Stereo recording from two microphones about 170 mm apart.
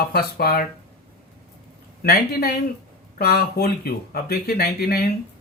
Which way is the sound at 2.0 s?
65° left (ahead or behind).